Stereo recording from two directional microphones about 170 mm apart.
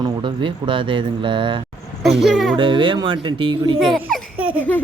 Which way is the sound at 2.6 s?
30° right (ahead or behind).